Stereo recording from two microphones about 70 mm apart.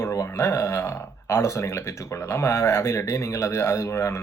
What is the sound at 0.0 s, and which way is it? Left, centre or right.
Speech, left.